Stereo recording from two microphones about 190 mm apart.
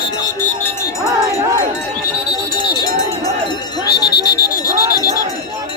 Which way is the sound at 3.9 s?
55° left (ahead or behind).